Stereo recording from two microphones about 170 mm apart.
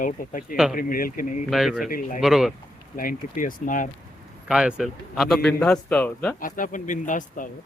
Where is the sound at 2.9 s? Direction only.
55° left (ahead or behind).